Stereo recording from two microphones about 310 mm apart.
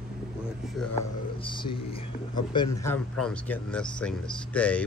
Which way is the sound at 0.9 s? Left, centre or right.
Centre.